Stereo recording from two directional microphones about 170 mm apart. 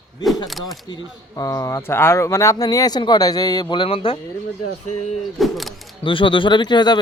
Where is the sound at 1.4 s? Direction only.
20° left (ahead or behind).